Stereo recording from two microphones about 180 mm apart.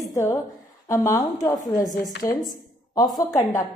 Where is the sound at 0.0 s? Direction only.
15° left (ahead or behind).